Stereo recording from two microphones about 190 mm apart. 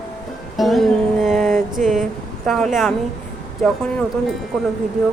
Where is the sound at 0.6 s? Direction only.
Centre (ahead or behind).